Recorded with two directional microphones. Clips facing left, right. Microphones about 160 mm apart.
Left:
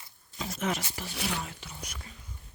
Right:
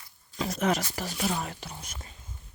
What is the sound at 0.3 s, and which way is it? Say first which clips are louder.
Speech: right 6 dB; 90° right.